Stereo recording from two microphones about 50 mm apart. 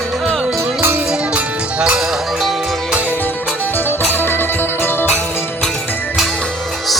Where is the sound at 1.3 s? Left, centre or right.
Right.